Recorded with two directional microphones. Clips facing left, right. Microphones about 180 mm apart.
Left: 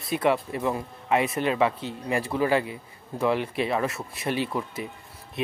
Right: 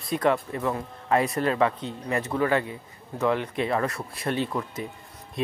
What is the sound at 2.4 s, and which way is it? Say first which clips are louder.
Speech: even; 25° left (ahead or behind).